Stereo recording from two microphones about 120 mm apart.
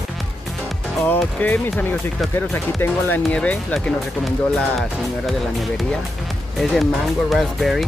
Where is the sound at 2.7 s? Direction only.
15° left (ahead or behind); by 7.8 s centre (ahead or behind).